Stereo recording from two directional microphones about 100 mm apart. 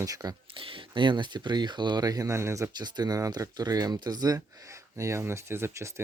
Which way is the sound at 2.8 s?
45° right (ahead or behind).